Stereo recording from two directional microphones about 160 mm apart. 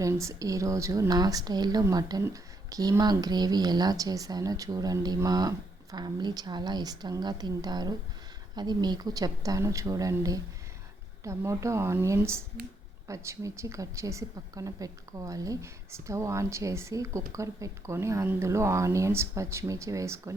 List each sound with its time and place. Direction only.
0.0 s a woman's voice: 20° right (ahead or behind)